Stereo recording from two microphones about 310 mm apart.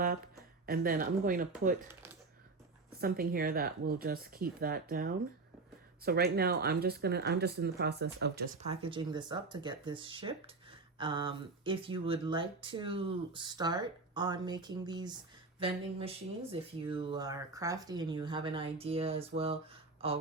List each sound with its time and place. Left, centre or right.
0.6 s speech: right
3.0 s speech: right
8.6 s speech: centre